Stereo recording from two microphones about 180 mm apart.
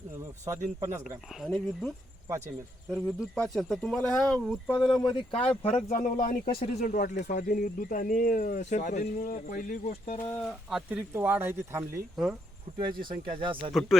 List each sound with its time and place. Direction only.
0.8 s speech: 15° right (ahead or behind)
1.4 s speech: 5° left (ahead or behind)
2.9 s speech: centre (ahead or behind)
4.9 s speech: 25° left (ahead or behind)
5.9 s speech: 50° left (ahead or behind)
10.2 s speech: 10° left (ahead or behind); by 11.9 s 15° right (ahead or behind)
12.1 s speech: 5° right (ahead or behind)
13.2 s speech: 30° right (ahead or behind)